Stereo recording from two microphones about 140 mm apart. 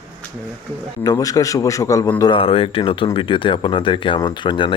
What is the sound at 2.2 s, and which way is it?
Speech, 35° left (ahead or behind).